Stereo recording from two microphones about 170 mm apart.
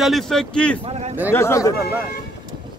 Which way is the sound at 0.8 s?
40° right (ahead or behind).